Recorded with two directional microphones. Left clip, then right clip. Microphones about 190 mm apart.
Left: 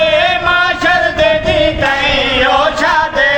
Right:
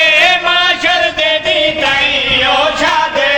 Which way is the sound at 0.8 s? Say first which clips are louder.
Left 1 dB; 5° right (ahead or behind).